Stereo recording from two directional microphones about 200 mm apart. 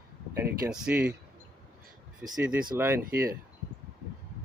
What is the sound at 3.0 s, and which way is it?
Speech, 45° right (ahead or behind).